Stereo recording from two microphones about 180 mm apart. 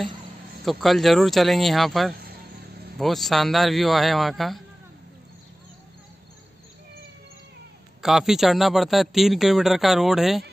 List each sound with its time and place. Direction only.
0.7 s a man's voice: centre (ahead or behind)
2.1 s a sound: 60° right (ahead or behind)
3.0 s a man's voice: centre (ahead or behind)
8.0 s a man's voice: centre (ahead or behind)